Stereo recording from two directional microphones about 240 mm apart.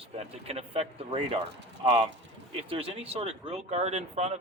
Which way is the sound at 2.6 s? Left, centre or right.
Right.